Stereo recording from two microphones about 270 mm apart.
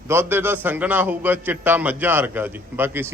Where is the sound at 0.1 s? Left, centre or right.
Centre.